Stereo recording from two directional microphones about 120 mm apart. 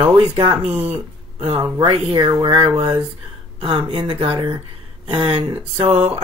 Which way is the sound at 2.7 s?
15° right (ahead or behind).